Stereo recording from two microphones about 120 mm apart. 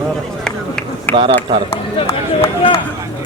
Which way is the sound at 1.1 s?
15° left (ahead or behind).